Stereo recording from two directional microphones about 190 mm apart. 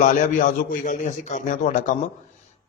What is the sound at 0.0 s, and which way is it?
A man's voice, 40° left (ahead or behind).